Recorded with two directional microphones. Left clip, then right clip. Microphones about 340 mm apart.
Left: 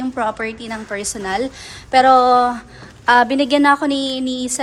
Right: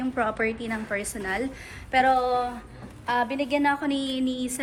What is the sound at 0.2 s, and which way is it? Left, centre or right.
A woman's voice, centre.